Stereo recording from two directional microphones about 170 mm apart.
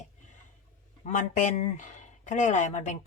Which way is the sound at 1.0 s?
45° left (ahead or behind).